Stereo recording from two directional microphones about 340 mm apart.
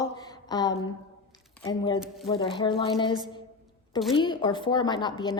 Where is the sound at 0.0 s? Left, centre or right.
Centre.